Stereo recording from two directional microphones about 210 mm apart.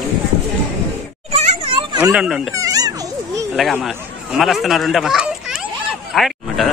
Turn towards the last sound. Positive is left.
turn(degrees=0)  # may be behind; listen again after turning